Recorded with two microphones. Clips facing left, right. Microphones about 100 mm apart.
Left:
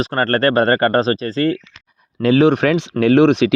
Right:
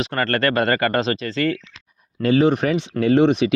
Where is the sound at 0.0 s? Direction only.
40° left (ahead or behind).